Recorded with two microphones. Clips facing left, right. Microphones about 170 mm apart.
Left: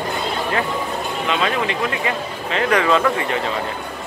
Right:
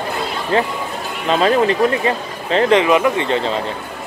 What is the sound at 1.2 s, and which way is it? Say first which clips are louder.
Speech: right 8 dB; 35° right (ahead or behind).